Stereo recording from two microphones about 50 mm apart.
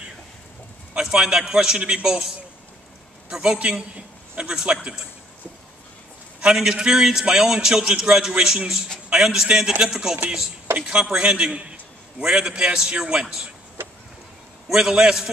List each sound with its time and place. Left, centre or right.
0.9 s a man's voice: centre
6.4 s a man's voice: centre
13.8 s vehicle: right
14.7 s a man's voice: centre